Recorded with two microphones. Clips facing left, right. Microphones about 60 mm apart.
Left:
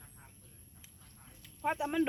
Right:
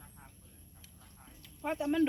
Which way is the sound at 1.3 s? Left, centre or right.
Centre.